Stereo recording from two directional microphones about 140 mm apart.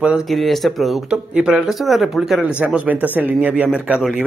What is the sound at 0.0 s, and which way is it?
Speech, 5° right (ahead or behind).